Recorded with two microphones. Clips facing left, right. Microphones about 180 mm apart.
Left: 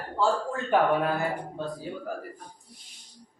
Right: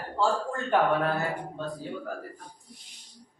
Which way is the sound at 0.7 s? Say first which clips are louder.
Left 1 dB; 10° left (ahead or behind).